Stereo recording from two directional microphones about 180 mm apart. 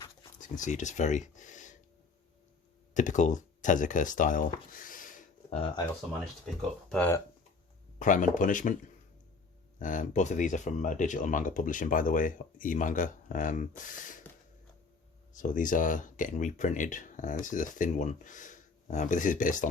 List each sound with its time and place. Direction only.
0.6 s speech: 40° left (ahead or behind)
2.9 s speech: 45° left (ahead or behind)
6.9 s speech: 10° left (ahead or behind)
7.9 s speech: 45° left (ahead or behind)
9.7 s speech: 45° left (ahead or behind)
15.3 s speech: 45° left (ahead or behind)